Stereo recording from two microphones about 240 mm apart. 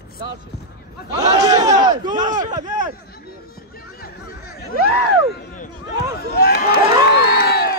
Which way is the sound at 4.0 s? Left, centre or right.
Left.